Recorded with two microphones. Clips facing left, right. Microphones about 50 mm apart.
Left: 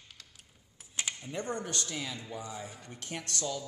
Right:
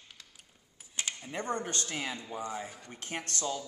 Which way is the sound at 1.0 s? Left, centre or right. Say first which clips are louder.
Even; centre.